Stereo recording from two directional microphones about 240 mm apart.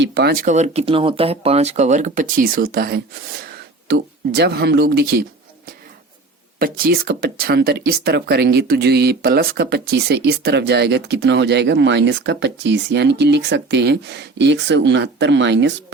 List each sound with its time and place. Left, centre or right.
0.0 s speech: right
0.5 s speech: right
6.6 s speech: right